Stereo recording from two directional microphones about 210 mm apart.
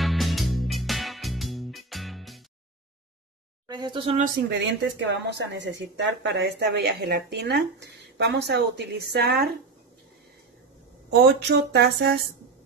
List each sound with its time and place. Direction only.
0.0 s music: centre (ahead or behind)
3.6 s speech: 20° right (ahead or behind)
4.6 s speech: 55° right (ahead or behind)
11.4 s speech: 55° right (ahead or behind)